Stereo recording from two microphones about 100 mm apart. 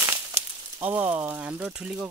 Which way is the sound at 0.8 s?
15° right (ahead or behind).